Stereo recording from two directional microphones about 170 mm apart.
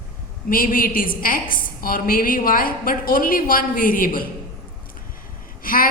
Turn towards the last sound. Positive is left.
turn(degrees=55)  # may be behind; listen again after turning